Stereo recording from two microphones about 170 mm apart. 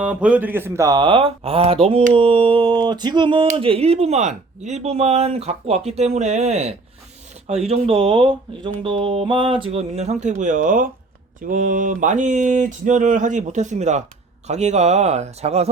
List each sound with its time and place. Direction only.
0.0 s speech: 5° right (ahead or behind); by 15.7 s 40° right (ahead or behind)